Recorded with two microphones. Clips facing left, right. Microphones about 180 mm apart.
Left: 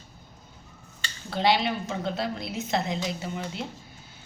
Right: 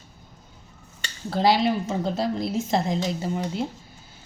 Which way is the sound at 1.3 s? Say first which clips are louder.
Right 4 dB; 40° right (ahead or behind).